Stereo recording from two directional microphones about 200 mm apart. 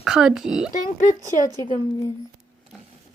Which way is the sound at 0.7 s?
40° left (ahead or behind).